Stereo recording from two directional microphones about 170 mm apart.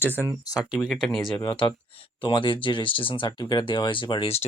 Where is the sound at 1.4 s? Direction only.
25° left (ahead or behind).